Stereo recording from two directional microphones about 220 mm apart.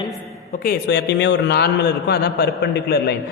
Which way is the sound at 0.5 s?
40° left (ahead or behind).